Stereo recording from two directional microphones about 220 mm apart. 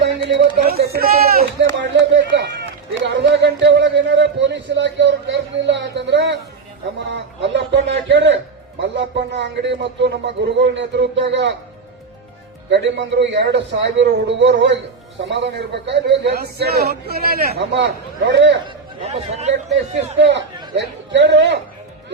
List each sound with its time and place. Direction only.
0.0 s speech: 50° right (ahead or behind)
3.0 s a sound: 50° right (ahead or behind)
8.8 s a man's voice: 55° right (ahead or behind)
12.7 s a man's voice: 55° right (ahead or behind)
19.0 s speech: 30° right (ahead or behind)
20.7 s a man's voice: 55° right (ahead or behind)